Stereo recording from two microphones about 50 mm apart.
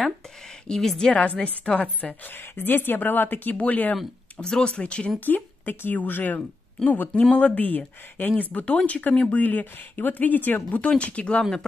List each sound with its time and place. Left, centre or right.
0.7 s a woman's voice: centre
1.1 s a woman's voice: left
2.2 s speech: left
4.4 s a woman's voice: centre
5.2 s a woman's voice: left
9.4 s speech: left